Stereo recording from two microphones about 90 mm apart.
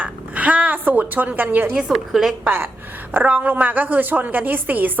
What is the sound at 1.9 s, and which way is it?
Speech, 5° right (ahead or behind).